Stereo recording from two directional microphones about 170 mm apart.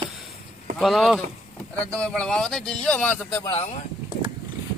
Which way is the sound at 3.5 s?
40° left (ahead or behind).